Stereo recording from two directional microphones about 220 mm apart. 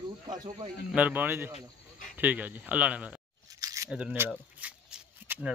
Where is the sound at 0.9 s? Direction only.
5° right (ahead or behind).